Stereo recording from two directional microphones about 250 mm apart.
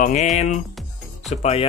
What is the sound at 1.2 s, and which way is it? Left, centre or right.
Speech, left.